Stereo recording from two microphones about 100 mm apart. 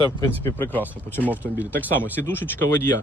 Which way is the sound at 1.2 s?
15° right (ahead or behind).